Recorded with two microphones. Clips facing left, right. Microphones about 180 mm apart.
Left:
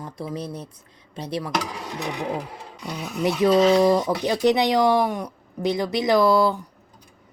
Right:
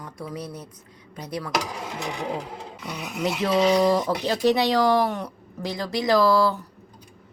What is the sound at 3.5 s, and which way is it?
Speech, 15° right (ahead or behind).